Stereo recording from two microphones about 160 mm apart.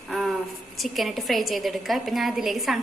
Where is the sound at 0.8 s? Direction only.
Centre (ahead or behind).